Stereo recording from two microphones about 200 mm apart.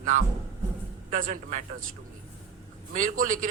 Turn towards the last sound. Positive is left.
turn(degrees=-40)  # may be behind; listen again after turning